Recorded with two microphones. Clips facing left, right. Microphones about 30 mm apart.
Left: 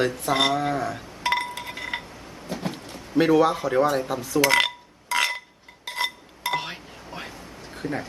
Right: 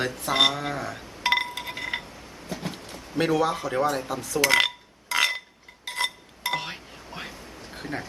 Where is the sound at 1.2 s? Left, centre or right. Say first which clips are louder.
Right 1 dB; centre.